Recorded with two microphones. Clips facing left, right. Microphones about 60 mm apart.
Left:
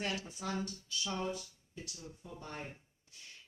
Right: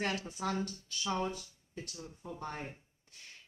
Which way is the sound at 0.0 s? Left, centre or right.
Right.